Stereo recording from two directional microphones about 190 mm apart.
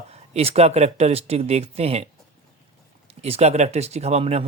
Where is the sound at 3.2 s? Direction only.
35° right (ahead or behind).